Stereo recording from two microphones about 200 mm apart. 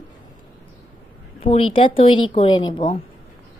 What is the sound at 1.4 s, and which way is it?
Speech, 25° left (ahead or behind).